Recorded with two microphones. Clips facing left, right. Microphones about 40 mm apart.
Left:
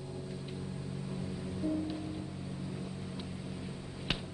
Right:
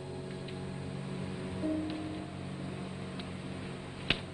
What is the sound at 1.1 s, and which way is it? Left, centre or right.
Music, right.